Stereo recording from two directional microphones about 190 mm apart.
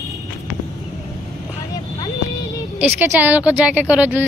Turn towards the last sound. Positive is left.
turn(degrees=-10)  # may be behind; listen again after turning